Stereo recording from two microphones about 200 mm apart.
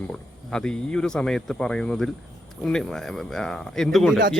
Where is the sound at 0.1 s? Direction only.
5° left (ahead or behind).